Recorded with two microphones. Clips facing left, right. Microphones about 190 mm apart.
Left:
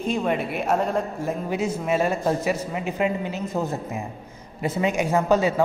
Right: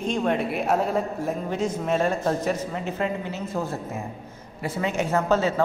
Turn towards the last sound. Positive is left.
turn(degrees=15)  # may be behind; listen again after turning